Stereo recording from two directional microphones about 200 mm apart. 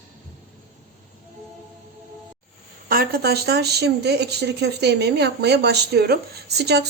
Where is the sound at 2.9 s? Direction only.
50° right (ahead or behind).